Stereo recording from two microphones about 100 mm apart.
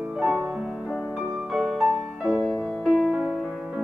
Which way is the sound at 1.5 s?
5° right (ahead or behind).